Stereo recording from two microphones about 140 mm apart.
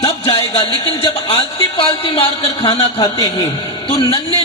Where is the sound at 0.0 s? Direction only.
40° left (ahead or behind).